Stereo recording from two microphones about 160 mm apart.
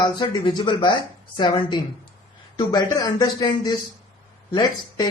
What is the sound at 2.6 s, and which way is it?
Speech, 25° left (ahead or behind).